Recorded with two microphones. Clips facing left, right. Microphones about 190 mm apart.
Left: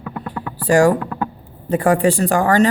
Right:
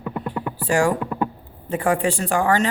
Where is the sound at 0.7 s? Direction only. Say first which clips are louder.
Left 6 dB; 40° left (ahead or behind).